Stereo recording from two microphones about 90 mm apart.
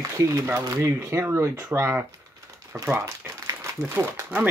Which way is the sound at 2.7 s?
5° right (ahead or behind).